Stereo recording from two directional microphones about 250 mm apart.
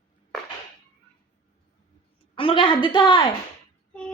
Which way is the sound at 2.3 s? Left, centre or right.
Left.